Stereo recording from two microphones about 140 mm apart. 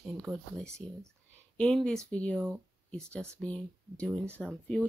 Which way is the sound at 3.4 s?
10° left (ahead or behind).